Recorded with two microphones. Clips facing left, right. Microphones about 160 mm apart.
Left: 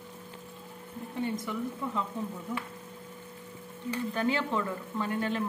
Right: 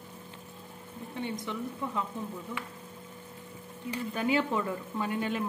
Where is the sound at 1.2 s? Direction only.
5° left (ahead or behind).